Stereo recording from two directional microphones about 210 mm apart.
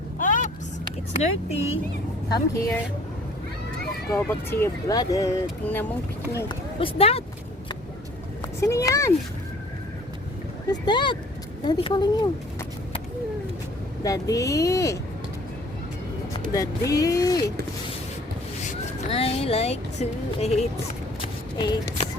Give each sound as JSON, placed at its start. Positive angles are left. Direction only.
{"t": 0.2, "sound": "vehicle", "side_deg": 40}
{"t": 1.2, "sound": "speech", "side_deg": 30}
{"t": 2.3, "sound": "speech", "side_deg": 15}
{"t": 4.1, "sound": "speech", "side_deg": 10}
{"t": 6.3, "sound": "speech", "side_deg": 25}
{"t": 8.6, "sound": "speech", "side_deg": 15}
{"t": 10.7, "sound": "speech", "side_deg": 20}
{"t": 14.0, "sound": "speech", "side_deg": 15}
{"t": 16.9, "sound": "speech", "side_deg": 15}
{"t": 19.0, "sound": "speech", "side_deg": 30}
{"t": 21.6, "sound": "speech", "side_deg": 20}